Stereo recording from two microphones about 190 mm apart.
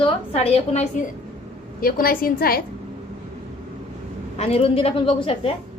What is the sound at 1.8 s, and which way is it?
Speech, 50° left (ahead or behind).